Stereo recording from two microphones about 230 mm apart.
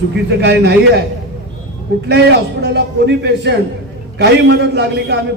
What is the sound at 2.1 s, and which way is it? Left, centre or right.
A man's voice, right.